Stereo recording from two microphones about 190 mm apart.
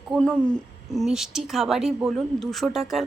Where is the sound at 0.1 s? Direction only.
5° left (ahead or behind).